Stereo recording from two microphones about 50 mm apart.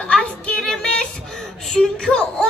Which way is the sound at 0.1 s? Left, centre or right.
Centre.